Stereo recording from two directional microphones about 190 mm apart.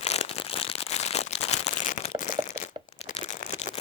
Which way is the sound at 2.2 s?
40° left (ahead or behind).